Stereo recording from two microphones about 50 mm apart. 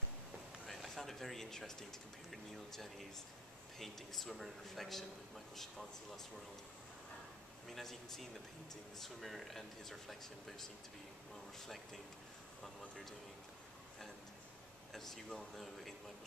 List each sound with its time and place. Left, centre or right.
0.7 s speech: centre
7.6 s speech: centre
11.6 s speech: centre
14.9 s speech: centre